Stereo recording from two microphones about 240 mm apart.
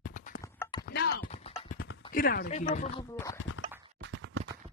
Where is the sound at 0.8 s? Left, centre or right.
Left.